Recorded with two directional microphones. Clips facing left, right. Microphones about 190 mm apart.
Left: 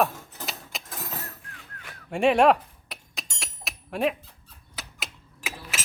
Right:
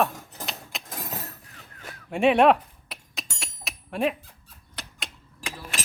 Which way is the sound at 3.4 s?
Centre (ahead or behind).